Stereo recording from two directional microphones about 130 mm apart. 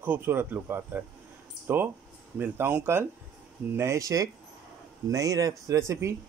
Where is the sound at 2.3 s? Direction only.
15° right (ahead or behind).